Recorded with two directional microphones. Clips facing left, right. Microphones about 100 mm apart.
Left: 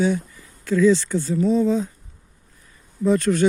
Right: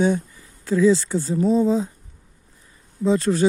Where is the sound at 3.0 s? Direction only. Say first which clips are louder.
Left 1 dB; 30° right (ahead or behind).